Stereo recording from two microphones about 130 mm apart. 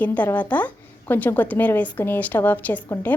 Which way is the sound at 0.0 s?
10° left (ahead or behind).